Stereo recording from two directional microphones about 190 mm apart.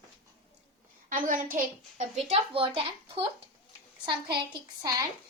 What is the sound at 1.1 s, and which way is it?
Speech, 45° right (ahead or behind).